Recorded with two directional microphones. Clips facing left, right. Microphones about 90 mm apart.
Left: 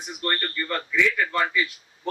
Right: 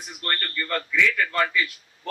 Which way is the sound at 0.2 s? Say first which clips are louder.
Left 1 dB; 20° left (ahead or behind).